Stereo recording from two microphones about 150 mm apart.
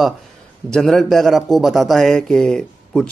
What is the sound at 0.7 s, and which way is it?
Speech, 5° left (ahead or behind).